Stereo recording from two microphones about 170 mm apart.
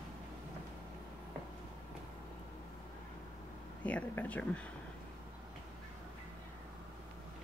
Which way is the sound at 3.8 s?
10° left (ahead or behind).